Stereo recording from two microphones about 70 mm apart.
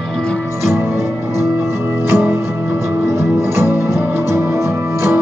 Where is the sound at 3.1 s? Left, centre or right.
Right.